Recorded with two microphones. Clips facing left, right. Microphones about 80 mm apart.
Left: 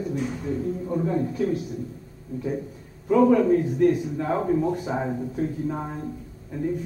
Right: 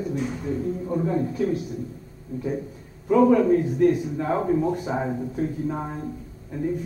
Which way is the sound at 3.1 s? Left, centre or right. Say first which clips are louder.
Right 1 dB; centre.